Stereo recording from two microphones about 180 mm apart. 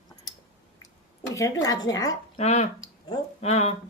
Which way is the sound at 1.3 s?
15° left (ahead or behind).